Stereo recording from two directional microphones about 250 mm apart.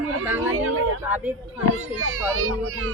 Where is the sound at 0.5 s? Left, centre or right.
Right.